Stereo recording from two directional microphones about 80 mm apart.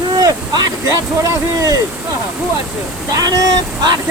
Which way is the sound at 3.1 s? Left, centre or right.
Right.